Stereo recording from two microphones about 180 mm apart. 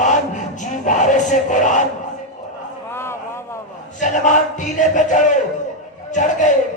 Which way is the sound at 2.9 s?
15° left (ahead or behind).